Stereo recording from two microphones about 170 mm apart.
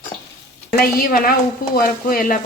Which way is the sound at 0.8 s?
60° left (ahead or behind).